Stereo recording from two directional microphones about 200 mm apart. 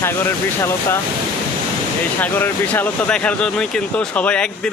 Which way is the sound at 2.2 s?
10° left (ahead or behind).